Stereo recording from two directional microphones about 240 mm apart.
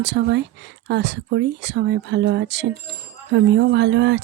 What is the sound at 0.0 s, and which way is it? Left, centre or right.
Speech, right.